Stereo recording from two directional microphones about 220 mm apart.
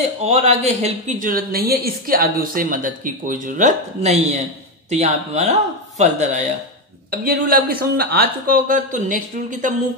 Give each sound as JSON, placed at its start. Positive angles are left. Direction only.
{"t": 0.2, "sound": "a woman's voice", "side_deg": -30}